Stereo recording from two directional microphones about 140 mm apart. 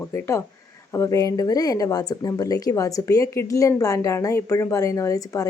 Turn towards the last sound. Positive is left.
turn(degrees=25)  # may be behind; listen again after turning